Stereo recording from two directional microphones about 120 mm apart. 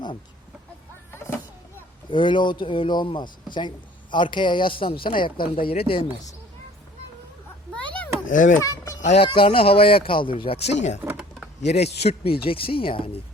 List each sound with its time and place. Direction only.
1.1 s vehicle: 20° left (ahead or behind)
2.0 s a man's voice: 45° left (ahead or behind)
8.3 s a child's voice: 90° left
8.6 s a child's voice: 25° left (ahead or behind)
9.0 s speech: 75° left (ahead or behind)
9.2 s a man's voice: 50° left (ahead or behind)
10.7 s a man's voice: 70° left (ahead or behind); by 13.1 s 50° left (ahead or behind)